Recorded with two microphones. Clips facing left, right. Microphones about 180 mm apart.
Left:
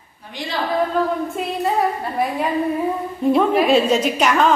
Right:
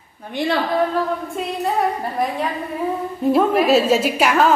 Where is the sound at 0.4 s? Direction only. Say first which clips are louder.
Right 9 dB; 60° right (ahead or behind).